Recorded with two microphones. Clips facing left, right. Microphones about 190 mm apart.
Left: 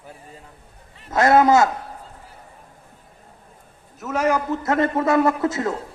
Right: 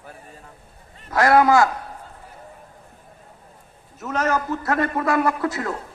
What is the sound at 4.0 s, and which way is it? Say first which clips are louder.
Speech: left 1 dB; centre (ahead or behind).